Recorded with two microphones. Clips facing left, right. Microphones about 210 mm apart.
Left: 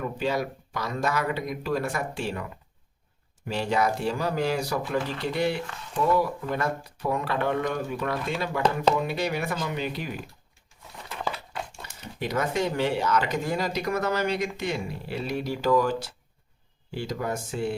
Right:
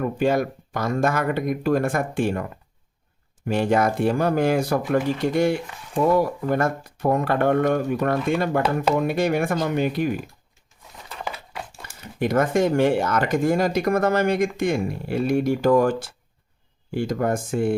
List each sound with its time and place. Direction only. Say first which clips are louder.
0.0 s speech: right 7 dB; 50° right (ahead or behind)
11.1 s a sound: even; 5° right (ahead or behind)
12.2 s speech: right 7 dB; 50° right (ahead or behind)